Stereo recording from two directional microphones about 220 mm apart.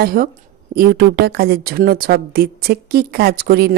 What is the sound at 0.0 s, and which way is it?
A woman's voice, 40° right (ahead or behind).